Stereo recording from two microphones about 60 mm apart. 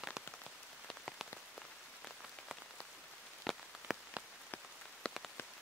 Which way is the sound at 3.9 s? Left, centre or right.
Centre.